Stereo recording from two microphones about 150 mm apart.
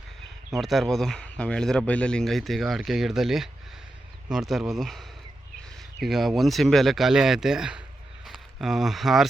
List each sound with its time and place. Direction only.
0.6 s speech: centre (ahead or behind)